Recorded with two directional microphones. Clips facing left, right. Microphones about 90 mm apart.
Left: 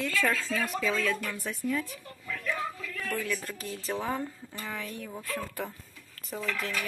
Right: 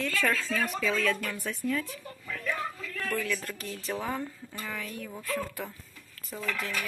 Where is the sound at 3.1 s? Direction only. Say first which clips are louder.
Right 1 dB; 20° left (ahead or behind).